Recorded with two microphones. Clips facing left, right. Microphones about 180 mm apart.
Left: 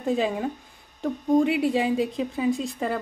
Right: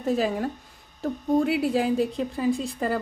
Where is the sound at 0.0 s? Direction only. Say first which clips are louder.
Even; centre (ahead or behind).